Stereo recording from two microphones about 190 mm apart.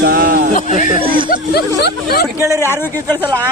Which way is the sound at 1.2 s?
50° left (ahead or behind).